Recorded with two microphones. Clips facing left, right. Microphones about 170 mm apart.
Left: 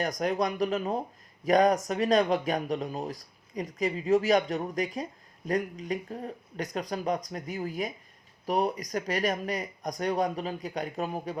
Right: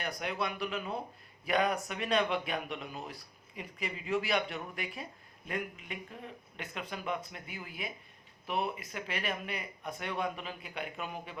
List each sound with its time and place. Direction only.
0.0 s speech: 40° left (ahead or behind)